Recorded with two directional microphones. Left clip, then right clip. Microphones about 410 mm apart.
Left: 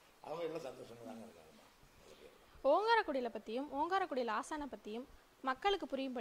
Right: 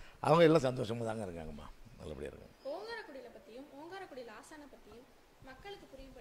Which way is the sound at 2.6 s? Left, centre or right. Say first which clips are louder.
Left 12 dB; left.